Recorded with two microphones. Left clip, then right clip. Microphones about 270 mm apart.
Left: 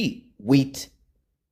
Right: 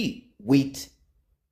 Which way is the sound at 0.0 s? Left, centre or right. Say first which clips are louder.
Left 3 dB; left.